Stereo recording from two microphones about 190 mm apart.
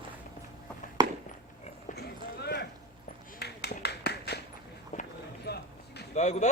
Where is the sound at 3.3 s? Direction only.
60° left (ahead or behind).